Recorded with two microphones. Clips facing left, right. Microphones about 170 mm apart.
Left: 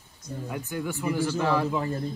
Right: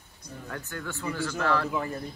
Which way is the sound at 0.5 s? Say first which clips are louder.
Left 5 dB; 15° left (ahead or behind).